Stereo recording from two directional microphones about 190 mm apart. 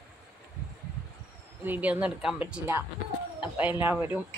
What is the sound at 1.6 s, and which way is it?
A woman's voice, 10° right (ahead or behind).